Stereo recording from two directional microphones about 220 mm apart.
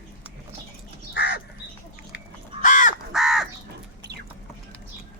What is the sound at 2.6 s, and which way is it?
Crow, 35° left (ahead or behind).